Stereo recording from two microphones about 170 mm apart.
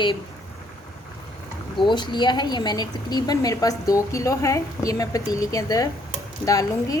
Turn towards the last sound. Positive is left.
turn(degrees=20)  # may be behind; listen again after turning